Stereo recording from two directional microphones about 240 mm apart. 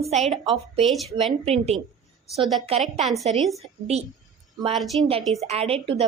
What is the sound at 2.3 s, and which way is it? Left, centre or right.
Speech, centre.